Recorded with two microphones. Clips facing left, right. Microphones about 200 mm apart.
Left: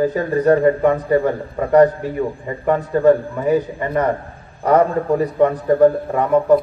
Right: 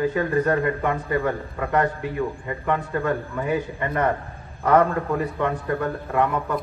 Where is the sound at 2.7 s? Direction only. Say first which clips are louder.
Left 10 dB; 40° left (ahead or behind).